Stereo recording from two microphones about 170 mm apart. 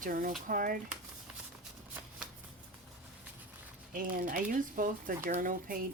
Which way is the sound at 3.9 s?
55° right (ahead or behind).